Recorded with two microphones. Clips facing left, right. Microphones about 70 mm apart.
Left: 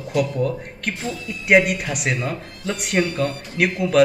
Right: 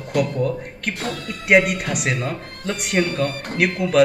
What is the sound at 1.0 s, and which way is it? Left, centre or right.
Speech, right.